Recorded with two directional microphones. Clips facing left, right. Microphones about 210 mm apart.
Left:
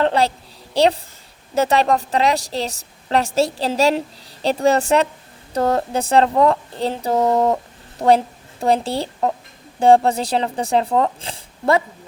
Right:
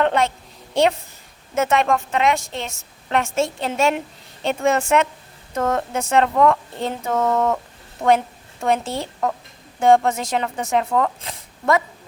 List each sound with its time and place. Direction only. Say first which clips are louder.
0.0 s a woman's voice: left 1 dB; 35° left (ahead or behind)
8.0 s a woman's voice: left 2 dB; 25° left (ahead or behind)